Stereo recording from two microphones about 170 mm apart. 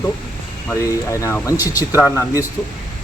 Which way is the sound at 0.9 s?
20° left (ahead or behind).